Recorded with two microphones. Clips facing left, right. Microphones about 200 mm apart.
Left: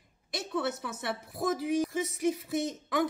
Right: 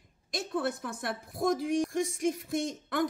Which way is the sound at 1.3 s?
5° left (ahead or behind).